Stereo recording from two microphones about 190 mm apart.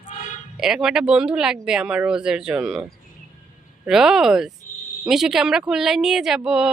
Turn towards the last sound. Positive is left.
turn(degrees=-5)  # may be behind; listen again after turning